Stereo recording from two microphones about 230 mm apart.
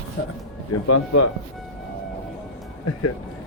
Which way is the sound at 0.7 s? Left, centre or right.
Left.